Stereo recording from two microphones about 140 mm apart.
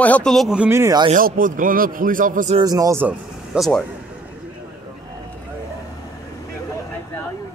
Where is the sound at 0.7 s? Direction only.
20° right (ahead or behind).